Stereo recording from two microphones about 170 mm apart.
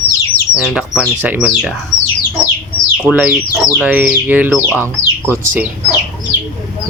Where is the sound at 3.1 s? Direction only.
10° right (ahead or behind).